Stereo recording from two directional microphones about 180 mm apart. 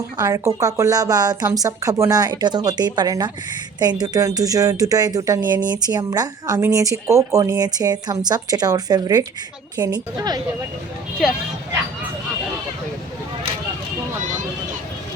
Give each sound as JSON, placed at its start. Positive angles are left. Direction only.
{"t": 0.2, "sound": "speech", "side_deg": -15}